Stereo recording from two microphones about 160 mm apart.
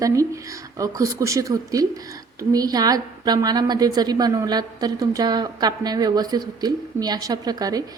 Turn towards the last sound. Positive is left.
turn(degrees=-25)  # may be behind; listen again after turning